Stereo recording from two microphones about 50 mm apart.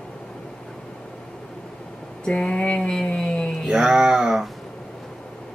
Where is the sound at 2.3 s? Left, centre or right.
Centre.